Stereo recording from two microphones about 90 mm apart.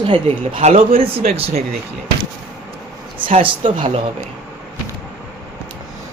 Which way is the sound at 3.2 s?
70° right (ahead or behind).